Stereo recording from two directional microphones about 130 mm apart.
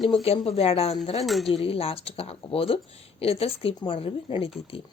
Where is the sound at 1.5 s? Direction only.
45° left (ahead or behind).